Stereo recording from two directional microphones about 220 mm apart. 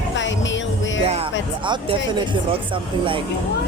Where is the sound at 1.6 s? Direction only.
20° right (ahead or behind).